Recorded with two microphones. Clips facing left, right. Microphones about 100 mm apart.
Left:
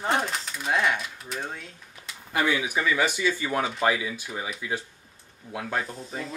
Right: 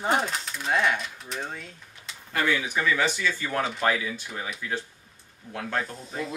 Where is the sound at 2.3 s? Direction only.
15° left (ahead or behind).